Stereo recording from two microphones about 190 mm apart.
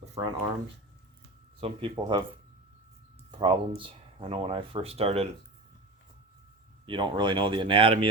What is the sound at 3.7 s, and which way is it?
Speech, 30° right (ahead or behind).